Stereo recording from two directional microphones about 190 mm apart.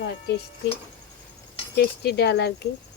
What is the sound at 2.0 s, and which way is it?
Speech, 60° left (ahead or behind).